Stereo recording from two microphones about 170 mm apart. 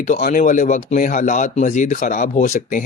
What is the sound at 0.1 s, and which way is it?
Speech, 50° left (ahead or behind).